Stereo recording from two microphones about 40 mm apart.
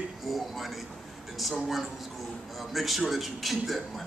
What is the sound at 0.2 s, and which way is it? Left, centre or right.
A man's voice, centre.